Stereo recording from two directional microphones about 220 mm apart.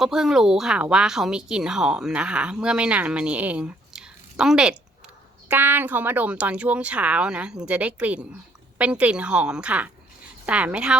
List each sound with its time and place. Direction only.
0.0 s speech: centre (ahead or behind)